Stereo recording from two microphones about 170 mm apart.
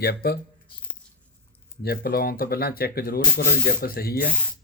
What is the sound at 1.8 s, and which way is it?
Sanding, 65° left (ahead or behind).